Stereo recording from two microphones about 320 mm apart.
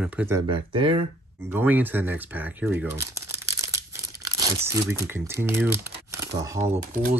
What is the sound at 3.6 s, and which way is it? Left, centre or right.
Tearing, centre.